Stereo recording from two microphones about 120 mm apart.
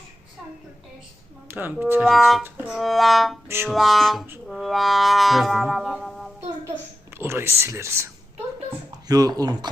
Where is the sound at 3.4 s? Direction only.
20° right (ahead or behind).